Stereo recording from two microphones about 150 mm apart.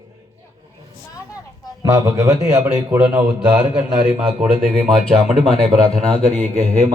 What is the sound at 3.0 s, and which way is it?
Mantra, 15° right (ahead or behind).